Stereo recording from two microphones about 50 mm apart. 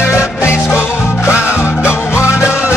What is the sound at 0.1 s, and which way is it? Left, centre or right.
Music, left.